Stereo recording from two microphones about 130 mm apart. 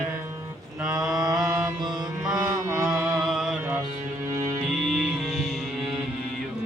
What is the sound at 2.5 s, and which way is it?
Mantra, 20° right (ahead or behind).